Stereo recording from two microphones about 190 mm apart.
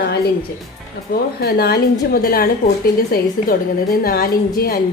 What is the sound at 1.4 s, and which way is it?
A woman's voice, 55° left (ahead or behind).